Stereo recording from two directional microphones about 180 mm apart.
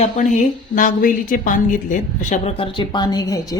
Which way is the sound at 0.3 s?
45° left (ahead or behind).